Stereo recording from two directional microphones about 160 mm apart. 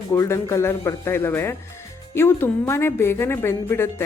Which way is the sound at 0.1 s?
20° left (ahead or behind).